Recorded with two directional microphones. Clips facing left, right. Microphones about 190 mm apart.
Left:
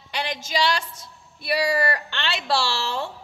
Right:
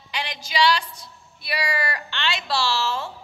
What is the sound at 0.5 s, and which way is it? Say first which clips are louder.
Speech: right 3 dB; 45° left (ahead or behind).